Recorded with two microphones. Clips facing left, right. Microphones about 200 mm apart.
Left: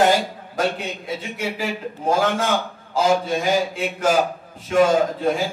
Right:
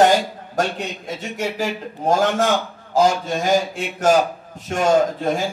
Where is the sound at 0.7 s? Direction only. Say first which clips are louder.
Even; 45° right (ahead or behind).